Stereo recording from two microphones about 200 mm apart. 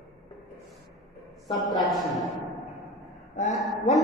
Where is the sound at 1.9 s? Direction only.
Centre (ahead or behind).